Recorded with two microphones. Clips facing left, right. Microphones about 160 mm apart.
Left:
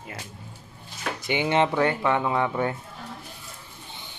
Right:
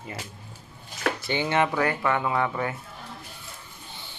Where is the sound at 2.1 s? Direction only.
5° left (ahead or behind).